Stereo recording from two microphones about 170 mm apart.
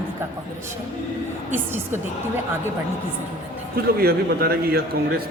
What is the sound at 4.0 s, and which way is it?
Speech, 65° right (ahead or behind).